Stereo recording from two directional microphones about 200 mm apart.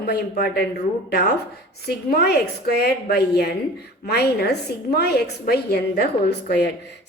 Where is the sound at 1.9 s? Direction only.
50° left (ahead or behind).